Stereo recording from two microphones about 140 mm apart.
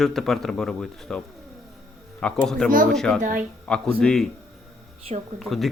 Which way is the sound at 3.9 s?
5° left (ahead or behind).